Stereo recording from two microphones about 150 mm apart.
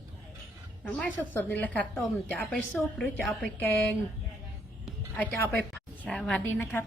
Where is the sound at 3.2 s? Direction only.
Centre (ahead or behind).